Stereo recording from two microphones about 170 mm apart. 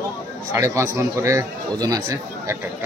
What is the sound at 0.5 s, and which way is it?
Speech, 15° right (ahead or behind).